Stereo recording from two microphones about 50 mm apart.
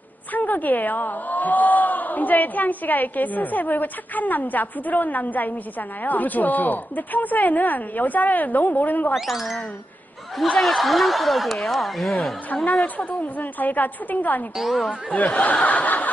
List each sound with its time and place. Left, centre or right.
0.3 s a woman's voice: left
9.1 s speech: centre
10.6 s speech: centre
12.8 s a woman's voice: left
14.6 s speech: centre
14.9 s a woman's voice: left